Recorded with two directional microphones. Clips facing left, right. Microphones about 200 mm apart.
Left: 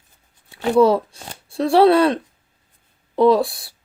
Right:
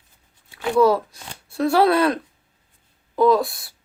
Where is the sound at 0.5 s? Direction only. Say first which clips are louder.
Left 2 dB; 30° left (ahead or behind).